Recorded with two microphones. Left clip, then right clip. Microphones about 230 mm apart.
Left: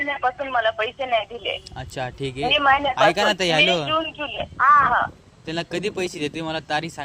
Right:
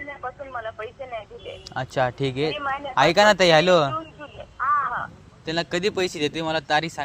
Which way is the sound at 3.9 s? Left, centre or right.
Left.